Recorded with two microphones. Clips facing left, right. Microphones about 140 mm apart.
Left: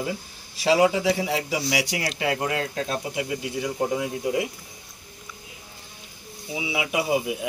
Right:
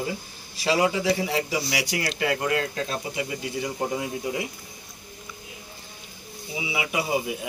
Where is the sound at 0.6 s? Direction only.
20° left (ahead or behind).